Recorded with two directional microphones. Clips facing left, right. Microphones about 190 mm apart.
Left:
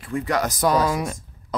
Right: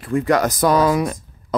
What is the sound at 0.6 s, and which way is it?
Speech, 85° right.